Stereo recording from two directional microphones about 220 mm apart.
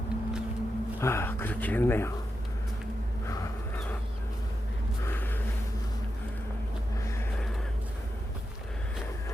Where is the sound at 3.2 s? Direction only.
15° left (ahead or behind).